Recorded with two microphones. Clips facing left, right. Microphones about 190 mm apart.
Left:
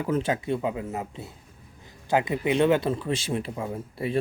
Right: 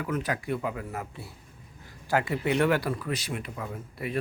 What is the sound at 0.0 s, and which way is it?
Speech, 25° left (ahead or behind).